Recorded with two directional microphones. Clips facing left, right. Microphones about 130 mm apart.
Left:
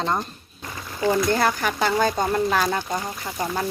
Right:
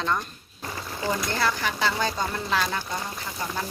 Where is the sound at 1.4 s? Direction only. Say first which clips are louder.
Left 4 dB; 50° left (ahead or behind).